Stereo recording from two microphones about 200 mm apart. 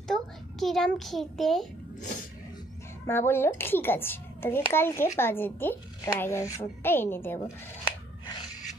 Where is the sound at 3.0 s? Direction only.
10° left (ahead or behind).